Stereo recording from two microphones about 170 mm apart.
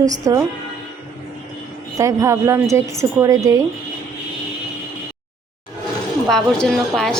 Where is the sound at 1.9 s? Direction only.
20° right (ahead or behind).